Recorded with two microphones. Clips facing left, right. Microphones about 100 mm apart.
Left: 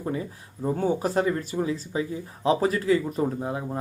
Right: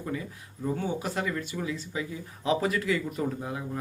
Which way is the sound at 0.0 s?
30° left (ahead or behind).